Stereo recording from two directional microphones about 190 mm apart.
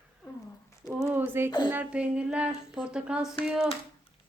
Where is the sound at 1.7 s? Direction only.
5° right (ahead or behind).